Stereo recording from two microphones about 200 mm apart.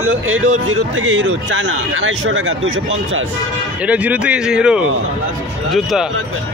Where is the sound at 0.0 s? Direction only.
90° right.